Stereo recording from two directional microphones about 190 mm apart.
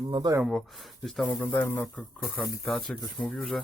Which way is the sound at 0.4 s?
Centre (ahead or behind).